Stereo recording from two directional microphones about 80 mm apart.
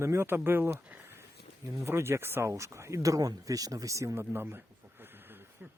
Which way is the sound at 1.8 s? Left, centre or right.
Right.